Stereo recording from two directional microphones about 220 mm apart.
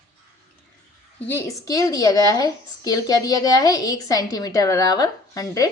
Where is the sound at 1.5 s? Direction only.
15° left (ahead or behind).